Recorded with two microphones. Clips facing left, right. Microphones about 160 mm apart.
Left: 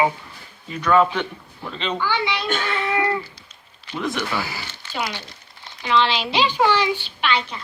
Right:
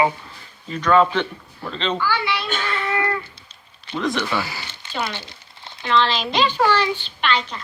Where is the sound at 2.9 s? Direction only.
15° left (ahead or behind).